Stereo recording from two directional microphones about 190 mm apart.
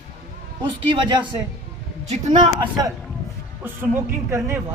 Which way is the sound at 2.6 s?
20° right (ahead or behind).